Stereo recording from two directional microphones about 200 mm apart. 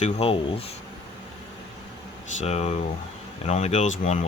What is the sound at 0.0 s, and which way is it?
Speech, 30° left (ahead or behind).